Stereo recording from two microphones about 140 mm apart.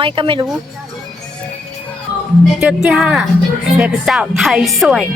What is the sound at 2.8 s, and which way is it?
Speech, 5° right (ahead or behind).